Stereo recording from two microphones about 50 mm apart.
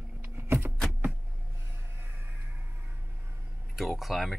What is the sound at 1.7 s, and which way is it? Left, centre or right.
Music, right.